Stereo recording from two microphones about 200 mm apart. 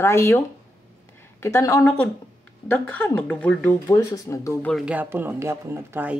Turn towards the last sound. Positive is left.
turn(degrees=-10)  # may be behind; listen again after turning